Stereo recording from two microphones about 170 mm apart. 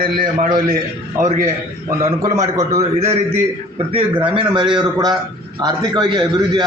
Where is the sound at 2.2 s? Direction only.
20° right (ahead or behind).